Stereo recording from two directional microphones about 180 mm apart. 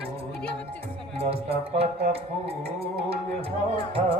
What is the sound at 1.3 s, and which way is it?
Music, 35° right (ahead or behind).